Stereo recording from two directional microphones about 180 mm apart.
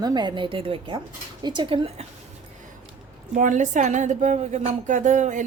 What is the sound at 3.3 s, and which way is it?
Speech, 45° right (ahead or behind).